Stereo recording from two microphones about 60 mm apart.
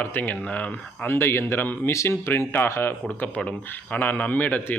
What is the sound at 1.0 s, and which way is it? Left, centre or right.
Speech, left.